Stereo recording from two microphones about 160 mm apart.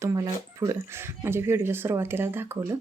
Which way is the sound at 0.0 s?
20° right (ahead or behind).